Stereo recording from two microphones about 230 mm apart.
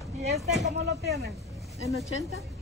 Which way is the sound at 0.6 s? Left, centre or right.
Right.